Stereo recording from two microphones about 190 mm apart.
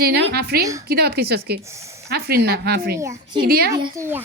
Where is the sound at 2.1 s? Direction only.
55° right (ahead or behind).